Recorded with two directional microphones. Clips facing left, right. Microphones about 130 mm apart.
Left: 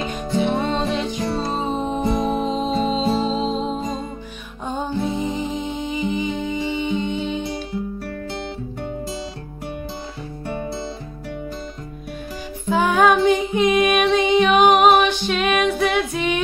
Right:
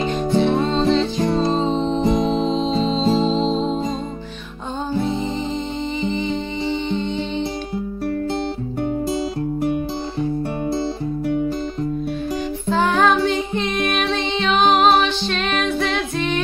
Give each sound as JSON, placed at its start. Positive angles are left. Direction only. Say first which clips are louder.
{"t": 0.4, "sound": "music", "louder": "right 1 dB", "side_deg": 15}
{"t": 3.5, "sound": "music", "louder": "right 3 dB", "side_deg": -30}
{"t": 5.0, "sound": "music", "louder": "right 1 dB", "side_deg": 10}
{"t": 12.6, "sound": "music", "louder": "left 1 dB", "side_deg": 10}